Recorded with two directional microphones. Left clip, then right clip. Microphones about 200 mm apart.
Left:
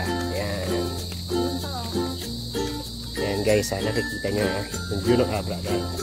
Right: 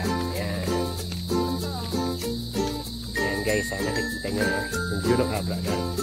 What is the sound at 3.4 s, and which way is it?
Speech, 45° left (ahead or behind).